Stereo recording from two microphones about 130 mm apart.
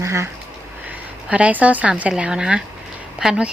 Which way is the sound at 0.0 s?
20° right (ahead or behind).